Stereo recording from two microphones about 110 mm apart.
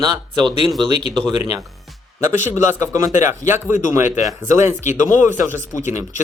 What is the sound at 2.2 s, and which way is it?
Speech, 30° right (ahead or behind).